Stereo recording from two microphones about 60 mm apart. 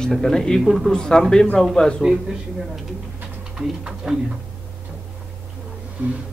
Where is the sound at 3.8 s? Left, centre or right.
Centre.